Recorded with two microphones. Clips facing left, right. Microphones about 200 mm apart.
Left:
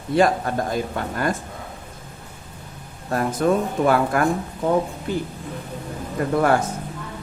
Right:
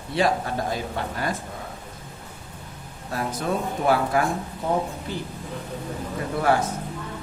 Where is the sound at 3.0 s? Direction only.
55° left (ahead or behind).